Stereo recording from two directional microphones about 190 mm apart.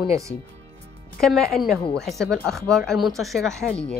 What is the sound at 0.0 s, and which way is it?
Speech, 15° right (ahead or behind).